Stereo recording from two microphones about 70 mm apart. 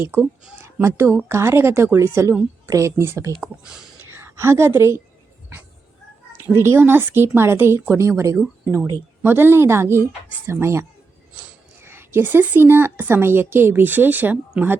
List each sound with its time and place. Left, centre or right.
0.0 s a woman's voice: right
0.6 s a sound: right
1.3 s a woman's voice: right
2.6 s a woman's voice: right
6.3 s a woman's voice: right
9.2 s a woman's voice: right